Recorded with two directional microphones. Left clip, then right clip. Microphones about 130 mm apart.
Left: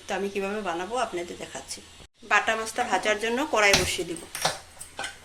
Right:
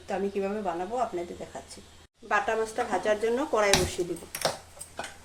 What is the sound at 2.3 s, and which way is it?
Speech, 20° right (ahead or behind).